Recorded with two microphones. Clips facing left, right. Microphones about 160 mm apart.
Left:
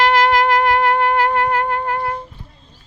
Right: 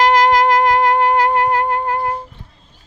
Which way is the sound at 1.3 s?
15° right (ahead or behind).